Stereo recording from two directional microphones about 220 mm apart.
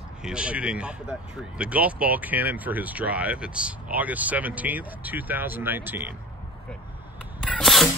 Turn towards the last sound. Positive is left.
turn(degrees=0)  # may be behind; listen again after turning